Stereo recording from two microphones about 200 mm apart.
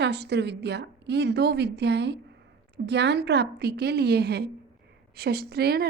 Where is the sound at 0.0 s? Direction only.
55° right (ahead or behind).